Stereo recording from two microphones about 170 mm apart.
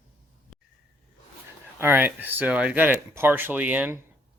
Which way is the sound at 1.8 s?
10° right (ahead or behind).